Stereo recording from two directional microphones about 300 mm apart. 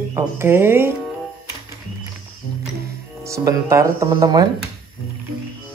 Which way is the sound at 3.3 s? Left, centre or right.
Centre.